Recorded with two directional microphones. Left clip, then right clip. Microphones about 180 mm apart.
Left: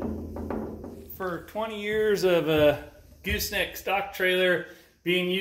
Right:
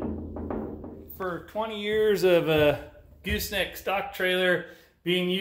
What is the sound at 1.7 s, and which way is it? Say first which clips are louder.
Speech: right 1 dB; 15° right (ahead or behind).